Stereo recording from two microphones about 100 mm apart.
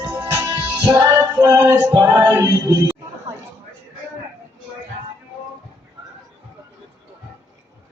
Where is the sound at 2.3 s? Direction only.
40° right (ahead or behind).